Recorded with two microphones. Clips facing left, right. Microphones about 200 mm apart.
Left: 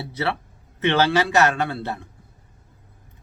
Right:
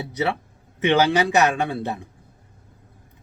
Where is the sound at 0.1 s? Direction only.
15° right (ahead or behind).